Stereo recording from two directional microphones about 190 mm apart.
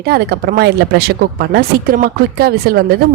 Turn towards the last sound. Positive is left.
turn(degrees=-55)  # may be behind; listen again after turning